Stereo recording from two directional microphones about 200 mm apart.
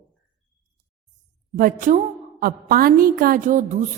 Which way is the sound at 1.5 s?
40° right (ahead or behind).